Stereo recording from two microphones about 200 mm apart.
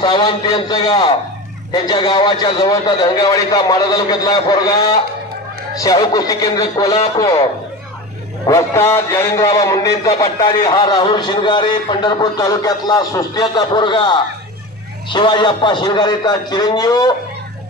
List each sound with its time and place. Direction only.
0.0 s a man's voice: 25° left (ahead or behind)
8.5 s a man's voice: 15° left (ahead or behind)